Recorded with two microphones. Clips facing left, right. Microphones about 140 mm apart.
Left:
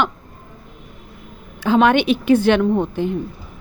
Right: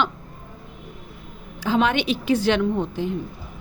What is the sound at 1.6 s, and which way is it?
Speech, 60° left (ahead or behind).